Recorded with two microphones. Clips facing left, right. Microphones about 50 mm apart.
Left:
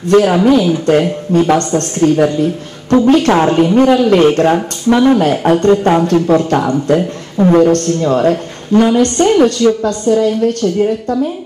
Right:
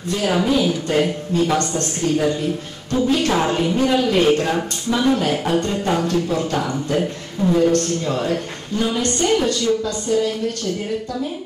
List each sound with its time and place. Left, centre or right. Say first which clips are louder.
0.1 s speech: left 14 dB; left
0.5 s speech: left 8 dB; left